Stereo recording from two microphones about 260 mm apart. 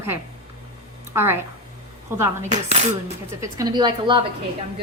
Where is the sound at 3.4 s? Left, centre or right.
Centre.